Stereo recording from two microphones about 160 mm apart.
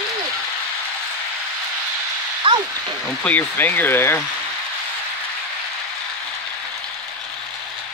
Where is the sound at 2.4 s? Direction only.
30° right (ahead or behind).